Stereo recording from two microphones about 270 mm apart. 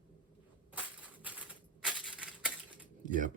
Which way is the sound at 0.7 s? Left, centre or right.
Centre.